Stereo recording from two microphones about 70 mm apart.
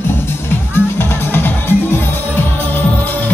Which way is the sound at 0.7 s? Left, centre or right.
Left.